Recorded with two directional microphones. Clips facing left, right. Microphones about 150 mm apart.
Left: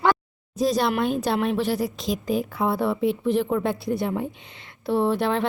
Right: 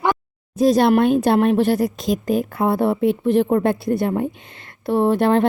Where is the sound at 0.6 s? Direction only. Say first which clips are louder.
Right 7 dB; 55° right (ahead or behind).